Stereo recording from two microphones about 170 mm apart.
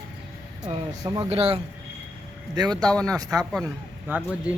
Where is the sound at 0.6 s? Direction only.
20° right (ahead or behind).